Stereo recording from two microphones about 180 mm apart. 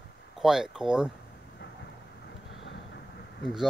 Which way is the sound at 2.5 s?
85° left.